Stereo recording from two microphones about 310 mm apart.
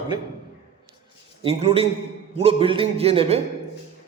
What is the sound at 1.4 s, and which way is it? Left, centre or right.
A man's voice, centre.